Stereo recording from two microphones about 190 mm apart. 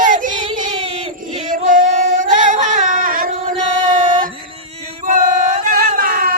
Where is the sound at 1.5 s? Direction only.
45° right (ahead or behind).